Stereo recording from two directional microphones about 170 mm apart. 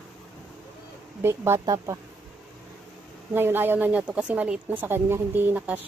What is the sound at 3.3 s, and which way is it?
A woman's voice, 10° right (ahead or behind).